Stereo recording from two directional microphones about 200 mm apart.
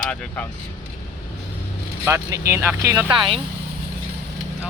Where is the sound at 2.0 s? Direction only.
15° right (ahead or behind).